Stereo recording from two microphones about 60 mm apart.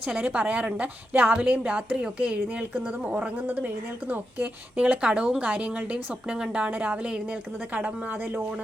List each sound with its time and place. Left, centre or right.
0.1 s a woman's voice: right
4.9 s a woman's voice: centre; by 8.4 s right